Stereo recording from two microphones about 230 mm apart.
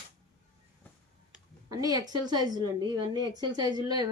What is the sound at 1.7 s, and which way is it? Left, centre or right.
Speech, centre.